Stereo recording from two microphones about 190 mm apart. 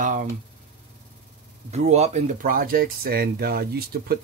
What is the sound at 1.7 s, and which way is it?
Speech, 35° right (ahead or behind).